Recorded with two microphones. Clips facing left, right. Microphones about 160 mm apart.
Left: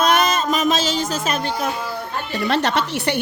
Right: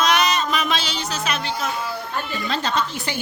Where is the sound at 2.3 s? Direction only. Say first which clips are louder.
Left 5 dB; 70° left (ahead or behind).